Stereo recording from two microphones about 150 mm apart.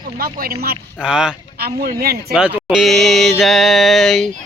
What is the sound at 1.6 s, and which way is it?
Speech, 90° right.